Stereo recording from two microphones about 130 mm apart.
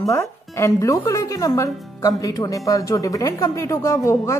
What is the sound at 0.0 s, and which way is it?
Speech, 20° left (ahead or behind).